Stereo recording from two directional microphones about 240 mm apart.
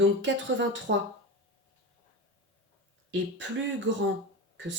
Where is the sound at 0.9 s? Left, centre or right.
Right.